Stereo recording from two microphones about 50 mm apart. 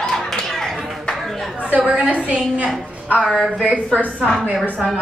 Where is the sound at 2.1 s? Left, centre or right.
Right.